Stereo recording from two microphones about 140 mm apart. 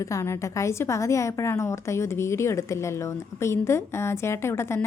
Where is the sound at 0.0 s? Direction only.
20° left (ahead or behind).